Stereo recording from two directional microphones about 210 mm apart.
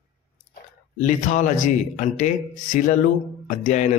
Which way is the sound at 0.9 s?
35° left (ahead or behind).